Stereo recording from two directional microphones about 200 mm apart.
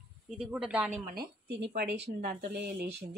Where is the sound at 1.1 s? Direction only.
50° right (ahead or behind).